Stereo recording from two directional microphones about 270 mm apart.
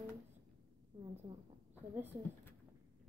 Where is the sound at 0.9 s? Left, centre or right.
Centre.